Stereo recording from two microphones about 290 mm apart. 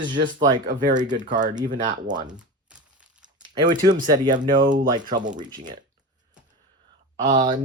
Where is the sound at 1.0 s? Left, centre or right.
Centre.